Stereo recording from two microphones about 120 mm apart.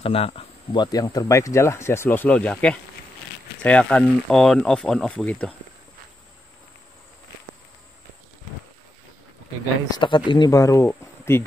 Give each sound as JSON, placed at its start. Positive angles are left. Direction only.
{"t": 0.0, "sound": "speech", "side_deg": 55}
{"t": 0.7, "sound": "speech", "side_deg": 35}
{"t": 9.9, "sound": "speech", "side_deg": 40}
{"t": 10.5, "sound": "speech", "side_deg": 25}
{"t": 10.9, "sound": "insect", "side_deg": 20}